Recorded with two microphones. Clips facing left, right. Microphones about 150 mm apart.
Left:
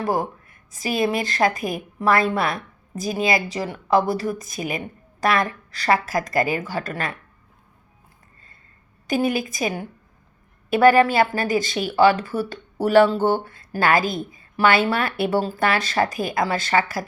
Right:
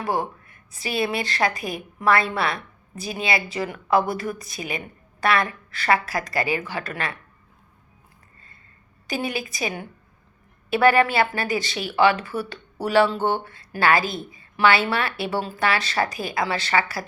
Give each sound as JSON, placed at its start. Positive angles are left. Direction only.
{"t": 0.0, "sound": "speech", "side_deg": 45}
{"t": 9.0, "sound": "speech", "side_deg": 50}